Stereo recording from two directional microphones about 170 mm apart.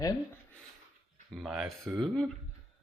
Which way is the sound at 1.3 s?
Centre (ahead or behind).